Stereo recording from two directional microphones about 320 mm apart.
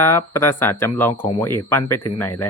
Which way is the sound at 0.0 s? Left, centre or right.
Centre.